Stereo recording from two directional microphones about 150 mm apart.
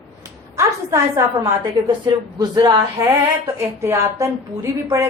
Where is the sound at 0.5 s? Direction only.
20° right (ahead or behind).